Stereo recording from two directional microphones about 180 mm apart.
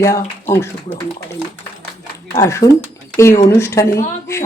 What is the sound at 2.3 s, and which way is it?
Speech, 15° left (ahead or behind).